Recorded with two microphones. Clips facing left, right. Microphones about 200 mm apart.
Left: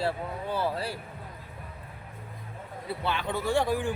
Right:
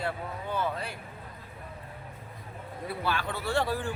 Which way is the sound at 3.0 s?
20° left (ahead or behind).